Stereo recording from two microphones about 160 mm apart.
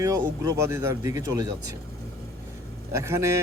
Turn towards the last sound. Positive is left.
turn(degrees=-15)  # may be behind; listen again after turning